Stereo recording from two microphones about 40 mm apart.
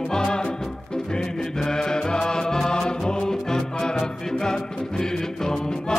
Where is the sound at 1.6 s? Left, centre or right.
Centre.